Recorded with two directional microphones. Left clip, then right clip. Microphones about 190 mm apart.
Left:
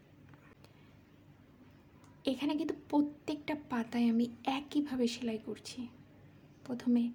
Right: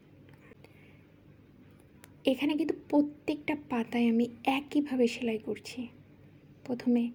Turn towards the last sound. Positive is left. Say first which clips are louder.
# right 4 dB
turn(degrees=-10)  # may be behind; listen again after turning